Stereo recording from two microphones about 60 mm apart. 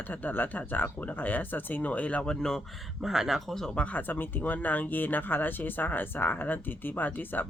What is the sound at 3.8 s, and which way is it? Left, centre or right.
Speech, left.